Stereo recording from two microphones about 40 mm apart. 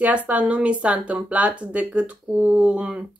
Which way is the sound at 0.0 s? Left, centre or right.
Right.